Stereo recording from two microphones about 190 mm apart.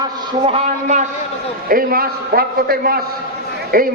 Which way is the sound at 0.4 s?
35° right (ahead or behind).